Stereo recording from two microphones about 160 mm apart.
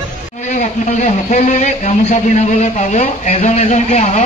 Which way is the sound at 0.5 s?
45° left (ahead or behind).